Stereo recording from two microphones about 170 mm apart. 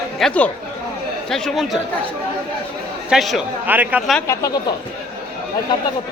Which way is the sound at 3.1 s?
Centre (ahead or behind).